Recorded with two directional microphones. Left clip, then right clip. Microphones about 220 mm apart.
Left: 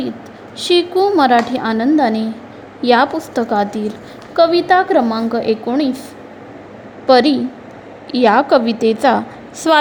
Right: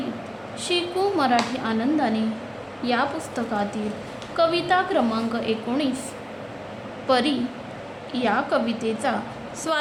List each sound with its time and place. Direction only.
0.6 s speech: 40° left (ahead or behind)
7.1 s speech: 35° left (ahead or behind)